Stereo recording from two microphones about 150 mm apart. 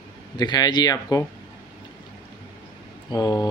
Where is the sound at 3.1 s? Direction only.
25° left (ahead or behind).